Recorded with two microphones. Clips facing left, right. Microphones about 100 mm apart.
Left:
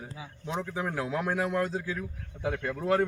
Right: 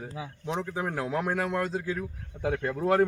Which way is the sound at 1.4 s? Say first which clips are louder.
Even; 10° left (ahead or behind).